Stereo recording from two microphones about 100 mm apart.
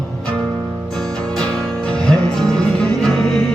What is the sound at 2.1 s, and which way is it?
Music, 5° left (ahead or behind).